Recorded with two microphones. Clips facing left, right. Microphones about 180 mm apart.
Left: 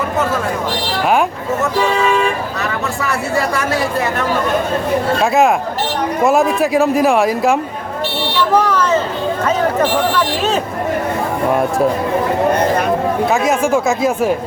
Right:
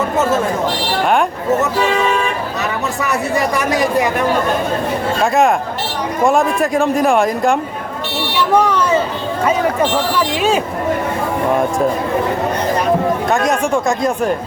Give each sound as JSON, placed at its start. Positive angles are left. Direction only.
{"t": 3.0, "sound": "speech", "side_deg": -20}
{"t": 5.2, "sound": "speech", "side_deg": 0}
{"t": 8.6, "sound": "speech", "side_deg": -10}
{"t": 10.2, "sound": "speech", "side_deg": -10}
{"t": 13.2, "sound": "speech", "side_deg": 5}